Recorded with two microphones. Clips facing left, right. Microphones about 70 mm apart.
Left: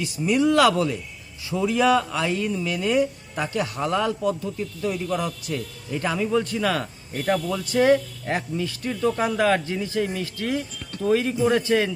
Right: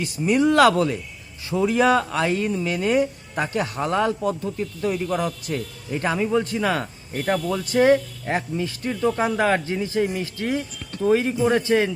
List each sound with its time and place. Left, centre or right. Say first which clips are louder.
0.0 s speech: right 1 dB; right